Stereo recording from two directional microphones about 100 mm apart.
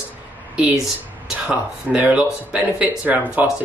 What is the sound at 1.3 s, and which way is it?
Speech, 10° right (ahead or behind).